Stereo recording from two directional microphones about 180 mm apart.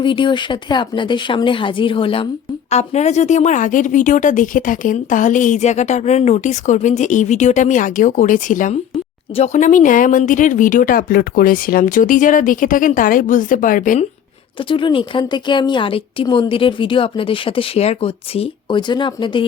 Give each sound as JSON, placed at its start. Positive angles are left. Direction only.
{"t": 0.0, "sound": "a woman's voice", "side_deg": 25}
{"t": 14.6, "sound": "a woman's voice", "side_deg": 30}